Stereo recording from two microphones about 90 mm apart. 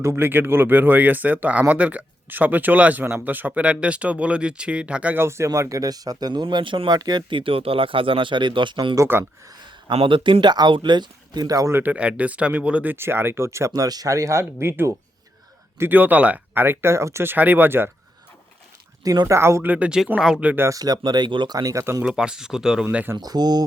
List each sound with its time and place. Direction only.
0.0 s speech: 30° right (ahead or behind)
5.5 s speech: 40° right (ahead or behind); by 6.8 s 65° right (ahead or behind)
6.8 s speech: 45° right (ahead or behind); by 9.0 s 60° right (ahead or behind)
9.9 s speech: 80° right; by 11.7 s 40° right (ahead or behind)
11.7 s speech: 20° right (ahead or behind)
17.3 s speech: 20° right (ahead or behind)
19.0 s speech: 45° right (ahead or behind)
19.3 s speech: 30° right (ahead or behind)
19.7 s speech: 10° right (ahead or behind)
20.4 s speech: 15° right (ahead or behind)
20.7 s speech: 40° right (ahead or behind); by 21.5 s 60° right (ahead or behind)
21.5 s speech: 40° right (ahead or behind)
22.0 s speech: 10° right (ahead or behind)
23.1 s speech: 50° right (ahead or behind)